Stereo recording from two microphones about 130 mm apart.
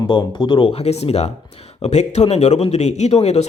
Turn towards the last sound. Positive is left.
turn(degrees=55)  # may be behind; listen again after turning